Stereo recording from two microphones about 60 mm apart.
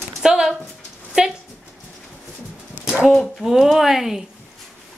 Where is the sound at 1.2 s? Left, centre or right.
Centre.